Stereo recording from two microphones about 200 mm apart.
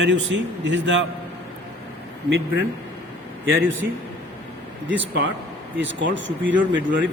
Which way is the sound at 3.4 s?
70° right (ahead or behind).